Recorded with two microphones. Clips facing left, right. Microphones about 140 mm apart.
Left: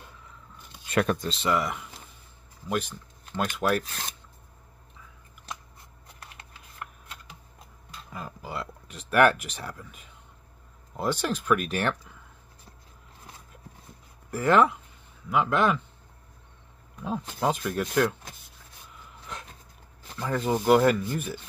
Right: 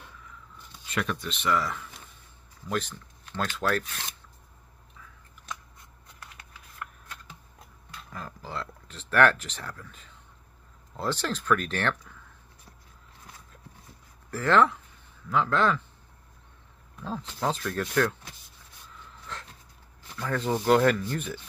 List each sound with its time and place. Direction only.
0.8 s speech: 50° left (ahead or behind)
1.4 s speech: 20° left (ahead or behind)
3.8 s filing: 40° left (ahead or behind)
6.3 s shuffling cards: 25° left (ahead or behind)
8.1 s a sound: 10° left (ahead or behind)
11.0 s speech: 10° left (ahead or behind)
14.3 s speech: 15° left (ahead or behind)
17.4 s speech: 10° left (ahead or behind)
19.3 s dog: 15° left (ahead or behind)
20.2 s speech: 10° left (ahead or behind)